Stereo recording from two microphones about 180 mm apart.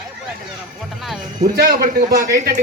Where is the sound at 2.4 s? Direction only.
50° right (ahead or behind).